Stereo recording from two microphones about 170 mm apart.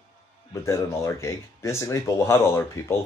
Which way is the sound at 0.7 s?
15° left (ahead or behind).